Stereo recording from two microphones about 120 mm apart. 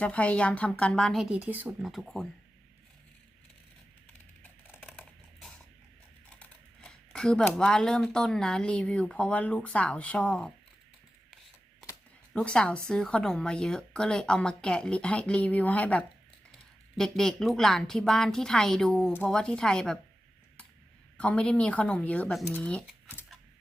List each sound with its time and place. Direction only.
0.0 s a woman's voice: 10° left (ahead or behind); by 1.9 s 15° right (ahead or behind)
1.9 s a woman's voice: centre (ahead or behind)
4.6 s typing: 15° left (ahead or behind)
6.4 s a sound: 5° left (ahead or behind)
7.5 s a woman's voice: 5° left (ahead or behind)
12.3 s a woman's voice: 10° left (ahead or behind)
21.2 s a woman's voice: 10° left (ahead or behind)